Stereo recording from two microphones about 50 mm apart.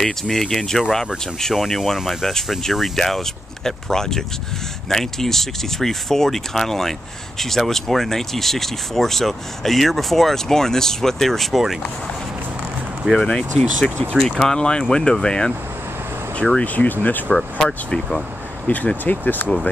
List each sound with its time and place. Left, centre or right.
0.0 s speech: centre
13.1 s speech: centre
16.6 s speech: left
17.3 s speech: centre
18.9 s speech: left